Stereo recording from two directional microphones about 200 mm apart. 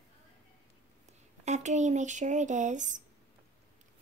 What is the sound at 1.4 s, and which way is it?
Speech, 35° right (ahead or behind).